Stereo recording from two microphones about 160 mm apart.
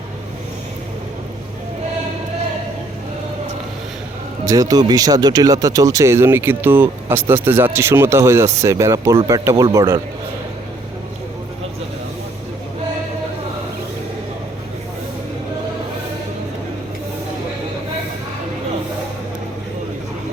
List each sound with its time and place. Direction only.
4.4 s speech: 20° right (ahead or behind)